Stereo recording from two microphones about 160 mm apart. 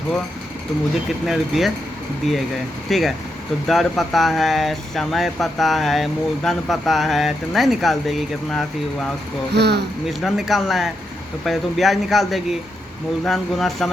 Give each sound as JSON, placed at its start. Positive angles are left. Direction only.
{"t": 1.2, "sound": "speech", "side_deg": 0}
{"t": 2.9, "sound": "speech", "side_deg": 0}
{"t": 9.6, "sound": "speech", "side_deg": -90}
{"t": 10.1, "sound": "speech", "side_deg": 0}